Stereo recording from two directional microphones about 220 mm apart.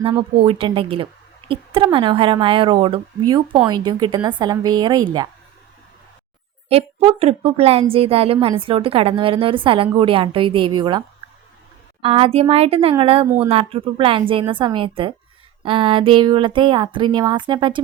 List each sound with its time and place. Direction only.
0.2 s a woman's voice: 25° right (ahead or behind)
6.7 s a woman's voice: 25° right (ahead or behind)
12.0 s a woman's voice: 25° right (ahead or behind)